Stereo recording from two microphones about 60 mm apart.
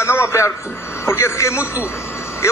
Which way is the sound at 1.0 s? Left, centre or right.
Left.